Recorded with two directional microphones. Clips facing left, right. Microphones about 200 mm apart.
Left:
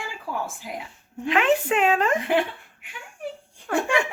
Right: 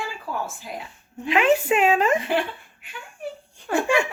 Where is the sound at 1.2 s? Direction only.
5° right (ahead or behind).